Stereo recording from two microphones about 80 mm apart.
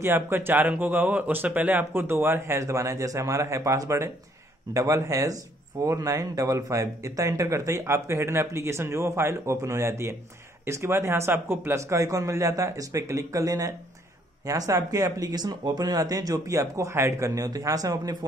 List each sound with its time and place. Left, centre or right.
0.0 s speech: right